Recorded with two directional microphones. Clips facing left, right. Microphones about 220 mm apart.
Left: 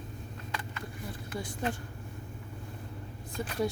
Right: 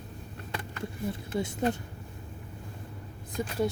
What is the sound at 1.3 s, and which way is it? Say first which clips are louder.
Speech: right 6 dB; 25° right (ahead or behind).